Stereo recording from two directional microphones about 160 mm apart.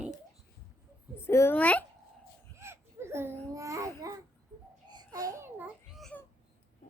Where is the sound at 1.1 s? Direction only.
15° left (ahead or behind).